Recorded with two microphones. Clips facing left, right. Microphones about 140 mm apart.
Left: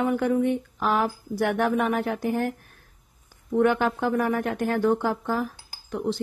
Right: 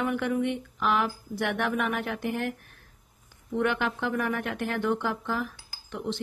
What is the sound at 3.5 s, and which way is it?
Speech, 40° left (ahead or behind).